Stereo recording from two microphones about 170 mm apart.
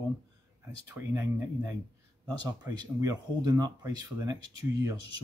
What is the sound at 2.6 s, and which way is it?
Speech, 20° right (ahead or behind).